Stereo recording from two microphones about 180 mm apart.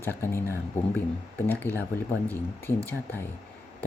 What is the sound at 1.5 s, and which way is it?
Speech, 10° left (ahead or behind).